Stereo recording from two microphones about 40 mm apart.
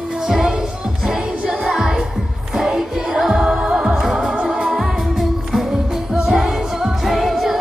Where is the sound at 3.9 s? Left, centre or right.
Centre.